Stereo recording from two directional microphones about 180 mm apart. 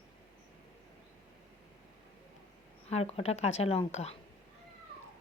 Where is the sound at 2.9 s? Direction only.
35° left (ahead or behind).